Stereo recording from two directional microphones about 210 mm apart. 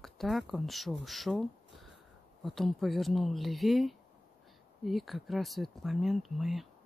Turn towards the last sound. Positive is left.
turn(degrees=0)  # may be behind; listen again after turning